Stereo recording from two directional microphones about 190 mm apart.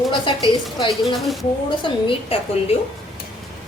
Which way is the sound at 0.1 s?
25° left (ahead or behind).